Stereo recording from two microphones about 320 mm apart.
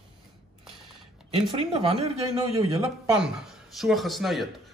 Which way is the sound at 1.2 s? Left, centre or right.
Centre.